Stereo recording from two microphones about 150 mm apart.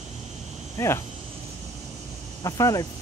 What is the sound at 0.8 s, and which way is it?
Speech, 20° left (ahead or behind).